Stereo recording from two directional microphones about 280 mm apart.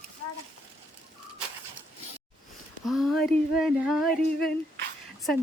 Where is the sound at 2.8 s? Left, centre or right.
Centre.